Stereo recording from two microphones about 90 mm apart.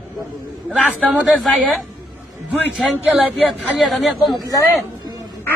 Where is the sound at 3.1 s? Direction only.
Centre (ahead or behind).